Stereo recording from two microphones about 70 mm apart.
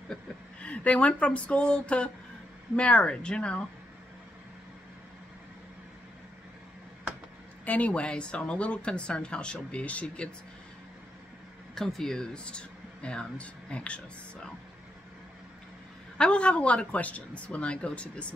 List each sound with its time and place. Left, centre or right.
0.1 s speech: centre
7.6 s speech: left
11.7 s speech: centre
16.2 s speech: centre